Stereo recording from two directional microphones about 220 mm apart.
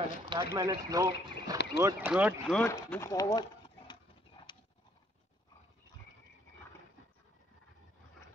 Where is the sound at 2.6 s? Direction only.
10° left (ahead or behind).